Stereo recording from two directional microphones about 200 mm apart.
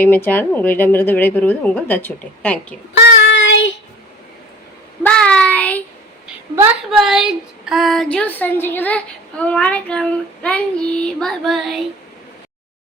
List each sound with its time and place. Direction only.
0.0 s speech: 10° left (ahead or behind)
2.9 s child singing: 60° left (ahead or behind)
5.0 s child singing: 5° left (ahead or behind)
6.9 s speech: centre (ahead or behind)